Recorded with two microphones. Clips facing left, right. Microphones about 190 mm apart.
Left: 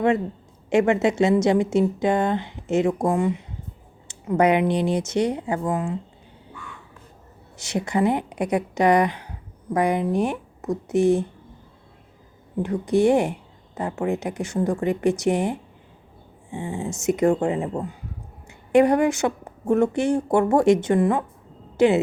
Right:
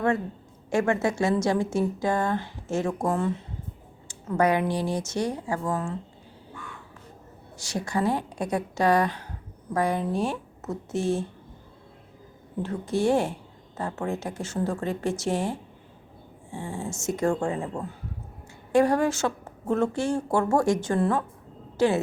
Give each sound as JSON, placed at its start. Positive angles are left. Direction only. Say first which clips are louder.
{"t": 0.7, "sound": "a woman's voice", "louder": "left 5 dB", "side_deg": 20}
{"t": 7.5, "sound": "a woman's voice", "louder": "left 4 dB", "side_deg": 20}
{"t": 12.6, "sound": "a woman's voice", "louder": "left 6 dB", "side_deg": 15}